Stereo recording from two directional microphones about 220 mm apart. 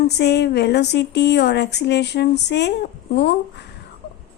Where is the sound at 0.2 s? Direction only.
50° left (ahead or behind).